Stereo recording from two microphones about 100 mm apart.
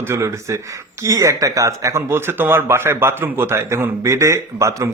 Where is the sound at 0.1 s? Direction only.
30° right (ahead or behind).